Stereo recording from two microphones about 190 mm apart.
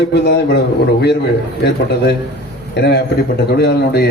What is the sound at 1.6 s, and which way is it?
A man's voice, 60° left (ahead or behind).